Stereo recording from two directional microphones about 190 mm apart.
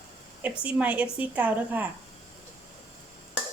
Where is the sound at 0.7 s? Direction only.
5° right (ahead or behind).